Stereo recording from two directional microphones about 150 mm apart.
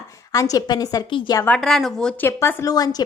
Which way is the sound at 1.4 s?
5° left (ahead or behind).